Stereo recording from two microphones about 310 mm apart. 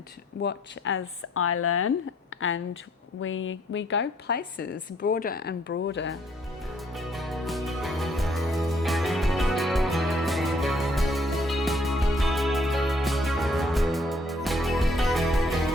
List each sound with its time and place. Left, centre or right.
0.4 s speech: left
2.3 s a sound: left
3.2 s a woman's voice: left
6.9 s music: centre